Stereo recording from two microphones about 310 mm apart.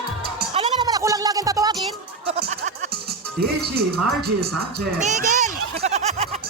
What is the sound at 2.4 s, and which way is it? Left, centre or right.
Music, right.